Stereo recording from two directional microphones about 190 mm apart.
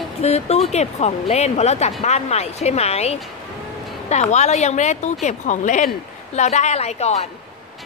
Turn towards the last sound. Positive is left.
turn(degrees=35)  # may be behind; listen again after turning